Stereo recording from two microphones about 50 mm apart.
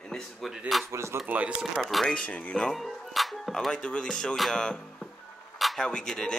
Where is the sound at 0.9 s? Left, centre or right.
Right.